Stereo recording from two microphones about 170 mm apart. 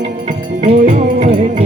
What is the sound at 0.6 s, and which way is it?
Music, 40° right (ahead or behind).